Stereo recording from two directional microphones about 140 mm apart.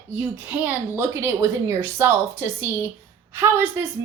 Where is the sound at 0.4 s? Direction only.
10° right (ahead or behind).